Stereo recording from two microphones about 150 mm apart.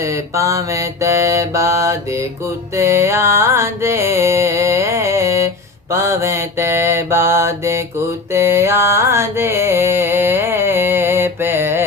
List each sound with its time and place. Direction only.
0.0 s mantra: 20° right (ahead or behind)
2.7 s music: 20° right (ahead or behind)
5.9 s mantra: 20° right (ahead or behind)
8.3 s music: 15° right (ahead or behind)